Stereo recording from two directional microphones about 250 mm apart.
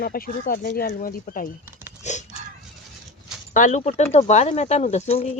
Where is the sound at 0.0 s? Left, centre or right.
Left.